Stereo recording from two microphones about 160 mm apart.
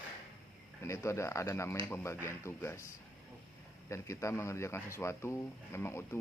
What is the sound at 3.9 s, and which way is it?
A man's voice, 20° left (ahead or behind).